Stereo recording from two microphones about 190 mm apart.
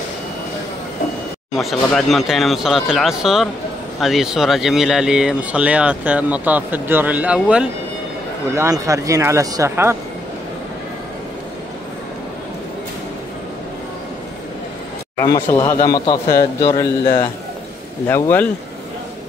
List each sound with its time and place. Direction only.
1.5 s speech: centre (ahead or behind)
8.5 s speech: 15° right (ahead or behind)
15.1 s a man's voice: 15° left (ahead or behind)